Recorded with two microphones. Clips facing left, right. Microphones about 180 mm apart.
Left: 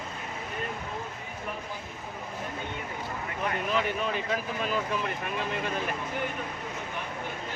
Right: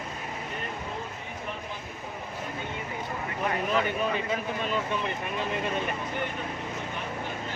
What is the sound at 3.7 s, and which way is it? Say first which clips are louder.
Speech: right 1 dB; centre (ahead or behind).